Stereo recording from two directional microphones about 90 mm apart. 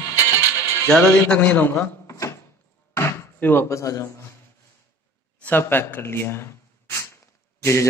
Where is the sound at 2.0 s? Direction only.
35° left (ahead or behind).